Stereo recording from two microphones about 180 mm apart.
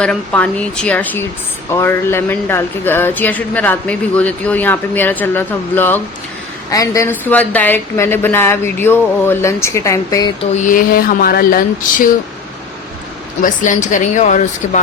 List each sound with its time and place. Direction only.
0.0 s speech: 5° left (ahead or behind)
10.5 s speech: 45° left (ahead or behind)
13.4 s speech: 45° left (ahead or behind)